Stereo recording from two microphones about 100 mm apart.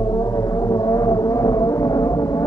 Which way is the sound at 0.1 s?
35° left (ahead or behind).